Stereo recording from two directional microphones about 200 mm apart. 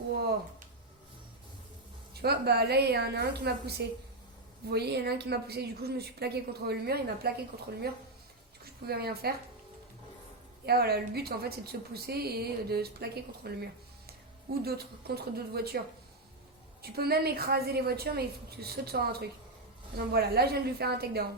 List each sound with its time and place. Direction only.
2.2 s a woman's voice: 55° right (ahead or behind)
8.9 s a woman's voice: 50° right (ahead or behind)
10.7 s a woman's voice: 50° right (ahead or behind)
16.8 s a woman's voice: 50° right (ahead or behind)